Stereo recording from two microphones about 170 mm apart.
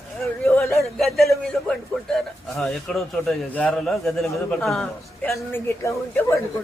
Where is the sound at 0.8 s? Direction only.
Centre (ahead or behind).